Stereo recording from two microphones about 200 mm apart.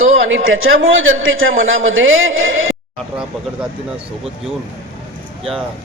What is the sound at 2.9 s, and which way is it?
Speech, 5° right (ahead or behind).